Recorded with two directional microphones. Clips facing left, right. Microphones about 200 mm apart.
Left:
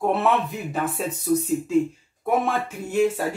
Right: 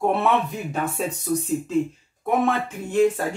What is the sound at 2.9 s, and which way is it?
Speech, 10° left (ahead or behind).